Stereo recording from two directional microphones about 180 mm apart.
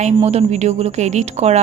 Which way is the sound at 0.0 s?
35° right (ahead or behind).